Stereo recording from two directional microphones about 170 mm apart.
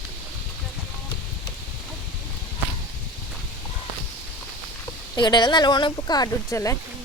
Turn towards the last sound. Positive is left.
turn(degrees=20)  # may be behind; listen again after turning